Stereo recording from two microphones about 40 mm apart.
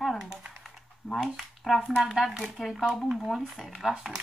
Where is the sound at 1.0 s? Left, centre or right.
Centre.